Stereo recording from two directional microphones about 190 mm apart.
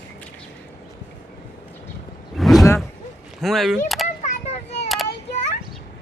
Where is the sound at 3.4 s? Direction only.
Centre (ahead or behind).